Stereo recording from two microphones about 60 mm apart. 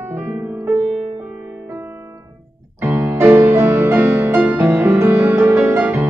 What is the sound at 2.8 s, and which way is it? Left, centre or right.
Music, right.